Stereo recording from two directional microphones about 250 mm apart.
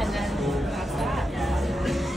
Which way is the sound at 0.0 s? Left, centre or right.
Centre.